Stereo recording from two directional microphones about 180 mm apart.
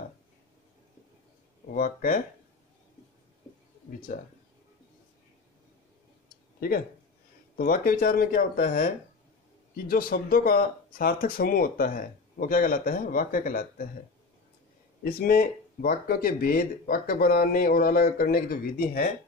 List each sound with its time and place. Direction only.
1.7 s speech: 50° left (ahead or behind)
4.1 s speech: 50° left (ahead or behind)
7.5 s speech: 55° left (ahead or behind)
15.0 s speech: 55° left (ahead or behind)